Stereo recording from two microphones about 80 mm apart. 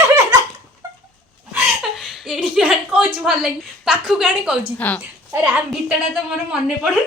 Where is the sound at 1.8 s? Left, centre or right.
Centre.